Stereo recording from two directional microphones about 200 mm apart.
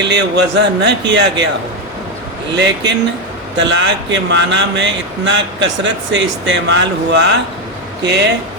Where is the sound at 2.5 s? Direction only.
60° right (ahead or behind).